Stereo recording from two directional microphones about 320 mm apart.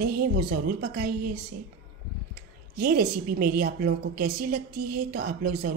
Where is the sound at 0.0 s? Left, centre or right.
Right.